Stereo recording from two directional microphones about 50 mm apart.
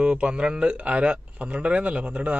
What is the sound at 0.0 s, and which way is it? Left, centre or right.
Speech, right.